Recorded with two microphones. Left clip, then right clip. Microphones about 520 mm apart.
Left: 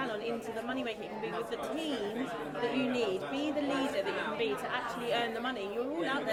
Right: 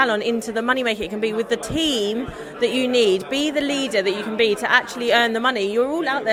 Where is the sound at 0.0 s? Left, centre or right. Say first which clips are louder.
Right 16 dB; right.